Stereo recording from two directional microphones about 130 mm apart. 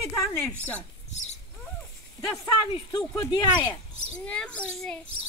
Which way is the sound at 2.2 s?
30° left (ahead or behind).